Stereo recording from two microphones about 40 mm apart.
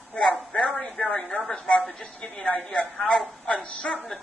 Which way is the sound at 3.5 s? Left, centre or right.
Left.